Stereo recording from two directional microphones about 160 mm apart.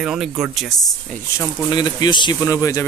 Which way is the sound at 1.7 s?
25° left (ahead or behind).